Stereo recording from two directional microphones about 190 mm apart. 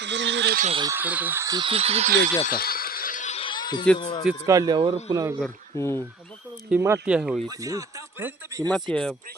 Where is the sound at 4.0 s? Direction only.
25° left (ahead or behind).